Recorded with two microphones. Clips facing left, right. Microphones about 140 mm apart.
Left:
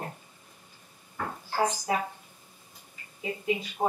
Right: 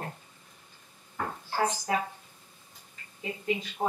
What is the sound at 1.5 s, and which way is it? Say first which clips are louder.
Speech: left 1 dB; 10° left (ahead or behind).